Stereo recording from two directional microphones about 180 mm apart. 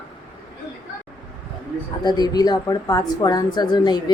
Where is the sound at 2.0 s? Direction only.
20° left (ahead or behind).